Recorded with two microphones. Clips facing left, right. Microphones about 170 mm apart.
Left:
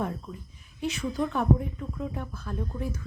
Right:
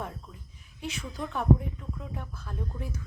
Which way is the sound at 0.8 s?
5° right (ahead or behind).